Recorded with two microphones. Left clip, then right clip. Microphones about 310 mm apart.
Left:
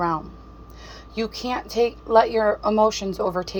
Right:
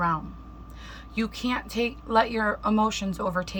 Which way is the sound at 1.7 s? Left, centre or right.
Centre.